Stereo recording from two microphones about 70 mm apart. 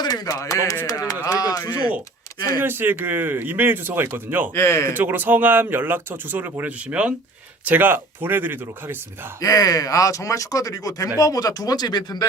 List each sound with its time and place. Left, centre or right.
0.0 s speech: left
0.9 s a sound: left
2.6 s speech: right
4.5 s speech: left
4.9 s speech: right
9.4 s speech: left